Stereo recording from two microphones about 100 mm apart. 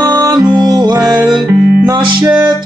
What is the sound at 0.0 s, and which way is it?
Music, 40° right (ahead or behind).